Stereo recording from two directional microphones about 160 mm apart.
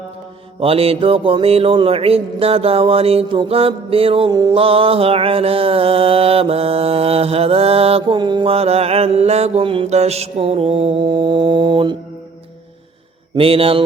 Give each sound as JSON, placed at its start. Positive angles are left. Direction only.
{"t": 0.6, "sound": "mantra", "side_deg": -35}
{"t": 4.3, "sound": "mantra", "side_deg": -25}
{"t": 13.3, "sound": "mantra", "side_deg": -35}